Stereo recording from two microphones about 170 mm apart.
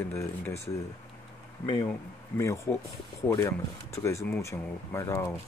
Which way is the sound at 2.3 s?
15° left (ahead or behind).